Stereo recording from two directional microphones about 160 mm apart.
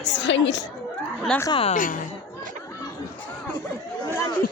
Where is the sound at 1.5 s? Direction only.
35° left (ahead or behind).